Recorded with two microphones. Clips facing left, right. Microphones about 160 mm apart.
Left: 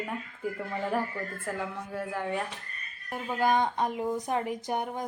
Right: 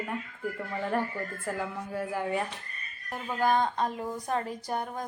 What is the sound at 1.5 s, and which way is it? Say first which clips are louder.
Speech: right 1 dB; centre (ahead or behind).